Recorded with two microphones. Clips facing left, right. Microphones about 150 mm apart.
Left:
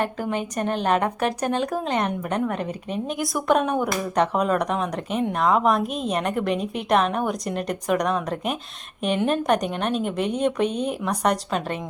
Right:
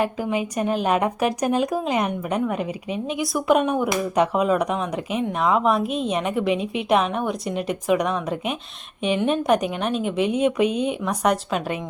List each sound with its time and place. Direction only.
0.0 s a woman's voice: 5° right (ahead or behind)